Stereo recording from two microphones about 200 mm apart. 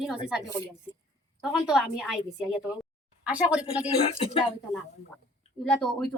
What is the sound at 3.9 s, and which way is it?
Speech, 30° left (ahead or behind).